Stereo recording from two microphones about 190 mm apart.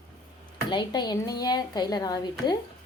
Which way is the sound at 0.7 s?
25° left (ahead or behind).